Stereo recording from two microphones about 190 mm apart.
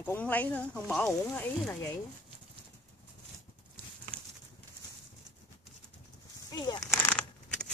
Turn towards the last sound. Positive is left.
turn(degrees=10)  # may be behind; listen again after turning